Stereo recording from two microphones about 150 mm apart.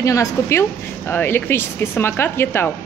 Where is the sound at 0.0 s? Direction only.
20° left (ahead or behind).